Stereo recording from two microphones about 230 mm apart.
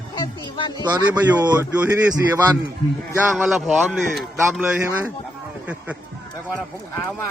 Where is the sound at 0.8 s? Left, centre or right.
Centre.